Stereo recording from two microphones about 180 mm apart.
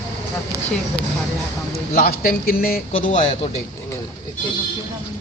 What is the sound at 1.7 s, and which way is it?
A man's voice, 55° left (ahead or behind).